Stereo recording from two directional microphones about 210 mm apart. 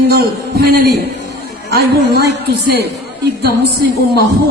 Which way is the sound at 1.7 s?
50° right (ahead or behind).